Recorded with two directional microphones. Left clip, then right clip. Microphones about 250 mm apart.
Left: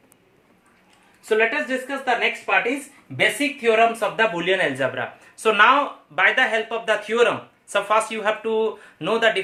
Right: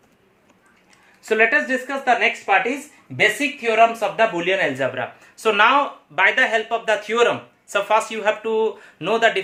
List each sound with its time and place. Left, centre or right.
1.2 s a woman's voice: right
3.2 s speech: centre